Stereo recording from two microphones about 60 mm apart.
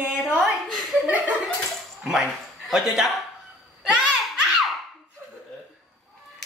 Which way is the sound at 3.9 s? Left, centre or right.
Centre.